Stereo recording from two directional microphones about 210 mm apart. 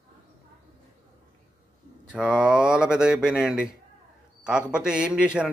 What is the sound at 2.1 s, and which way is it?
A man's voice, 5° right (ahead or behind).